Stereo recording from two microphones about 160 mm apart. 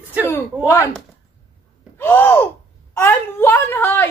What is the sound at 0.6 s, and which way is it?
Speech, 15° left (ahead or behind).